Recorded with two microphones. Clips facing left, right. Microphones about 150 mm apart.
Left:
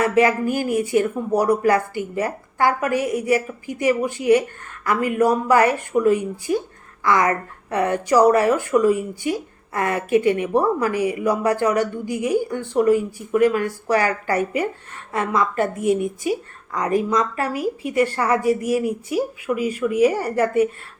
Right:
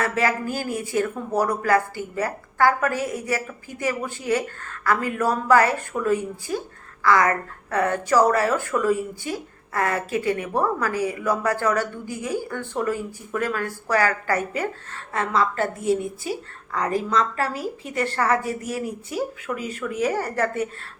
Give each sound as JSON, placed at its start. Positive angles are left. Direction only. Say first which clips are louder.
{"t": 0.0, "sound": "a woman's voice", "louder": "left 6 dB", "side_deg": 20}